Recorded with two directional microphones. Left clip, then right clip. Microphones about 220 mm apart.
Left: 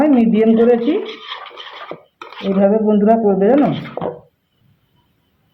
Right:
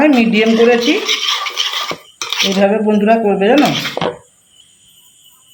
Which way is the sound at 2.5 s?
5° left (ahead or behind).